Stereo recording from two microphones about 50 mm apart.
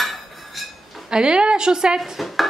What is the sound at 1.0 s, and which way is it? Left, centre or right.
Speech, centre.